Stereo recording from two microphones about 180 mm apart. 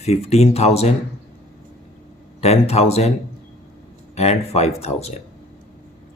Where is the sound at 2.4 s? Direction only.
35° left (ahead or behind).